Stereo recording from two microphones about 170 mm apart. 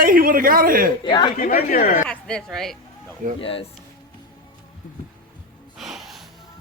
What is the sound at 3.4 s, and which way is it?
Speech, 35° left (ahead or behind).